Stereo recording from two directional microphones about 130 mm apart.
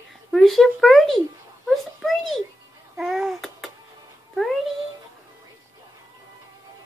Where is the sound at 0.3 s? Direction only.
Centre (ahead or behind).